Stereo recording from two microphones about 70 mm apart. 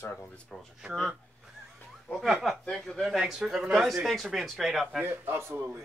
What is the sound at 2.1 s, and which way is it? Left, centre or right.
Speech, centre.